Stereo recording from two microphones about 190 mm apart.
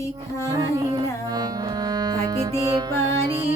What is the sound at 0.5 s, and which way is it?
Carnatic music, 20° right (ahead or behind).